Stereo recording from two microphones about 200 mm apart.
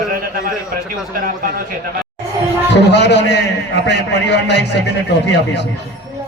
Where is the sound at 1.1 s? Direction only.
45° right (ahead or behind).